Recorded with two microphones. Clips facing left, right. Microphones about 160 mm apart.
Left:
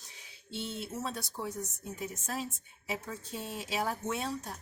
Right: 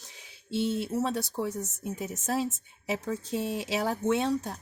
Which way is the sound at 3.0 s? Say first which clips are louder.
Right 10 dB; 80° right.